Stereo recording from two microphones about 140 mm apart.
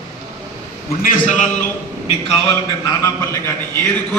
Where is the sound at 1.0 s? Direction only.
70° left (ahead or behind).